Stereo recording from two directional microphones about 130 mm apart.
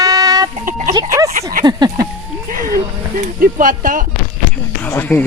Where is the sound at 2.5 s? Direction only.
90° right.